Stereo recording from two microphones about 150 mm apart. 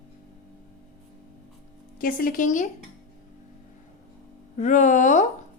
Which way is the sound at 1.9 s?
70° left (ahead or behind).